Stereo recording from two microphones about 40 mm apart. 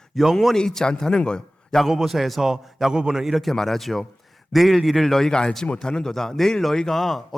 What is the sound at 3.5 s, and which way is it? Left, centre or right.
A man's voice, centre.